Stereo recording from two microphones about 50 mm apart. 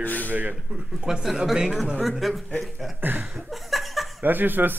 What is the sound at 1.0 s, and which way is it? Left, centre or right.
Speech, centre.